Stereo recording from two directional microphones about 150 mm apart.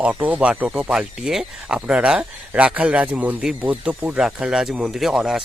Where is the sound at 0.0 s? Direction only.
10° right (ahead or behind).